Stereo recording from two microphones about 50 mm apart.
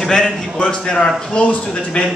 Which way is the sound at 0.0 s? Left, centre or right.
Centre.